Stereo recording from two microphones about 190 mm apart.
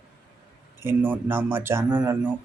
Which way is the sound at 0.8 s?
10° right (ahead or behind).